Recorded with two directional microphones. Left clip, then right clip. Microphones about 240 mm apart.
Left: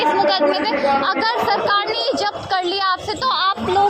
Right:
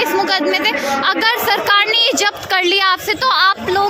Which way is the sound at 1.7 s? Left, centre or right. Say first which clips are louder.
Right 6 dB; right.